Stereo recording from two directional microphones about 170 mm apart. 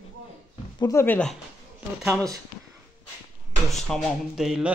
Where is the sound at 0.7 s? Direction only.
20° left (ahead or behind).